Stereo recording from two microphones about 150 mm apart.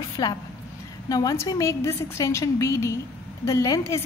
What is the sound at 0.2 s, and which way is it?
A woman's voice, 25° left (ahead or behind).